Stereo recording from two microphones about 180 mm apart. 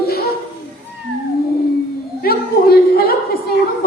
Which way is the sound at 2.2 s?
60° left (ahead or behind).